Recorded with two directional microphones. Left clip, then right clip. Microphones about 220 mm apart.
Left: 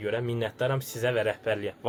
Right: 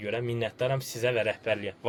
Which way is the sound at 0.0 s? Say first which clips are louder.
Left 1 dB; 10° left (ahead or behind).